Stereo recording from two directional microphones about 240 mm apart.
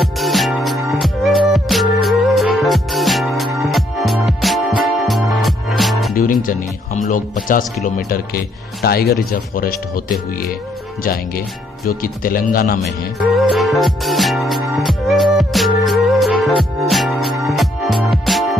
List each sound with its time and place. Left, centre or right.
0.2 s music: centre
6.1 s speech: left
11.9 s speech: left
13.4 s music: centre